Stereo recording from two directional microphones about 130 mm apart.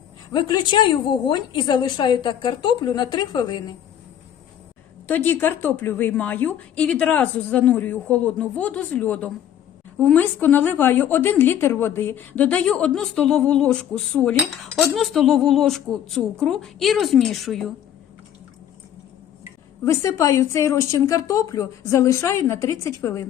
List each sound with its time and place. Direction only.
0.3 s a woman's voice: 30° left (ahead or behind)
5.0 s a woman's voice: 15° left (ahead or behind)
19.8 s a woman's voice: 25° left (ahead or behind)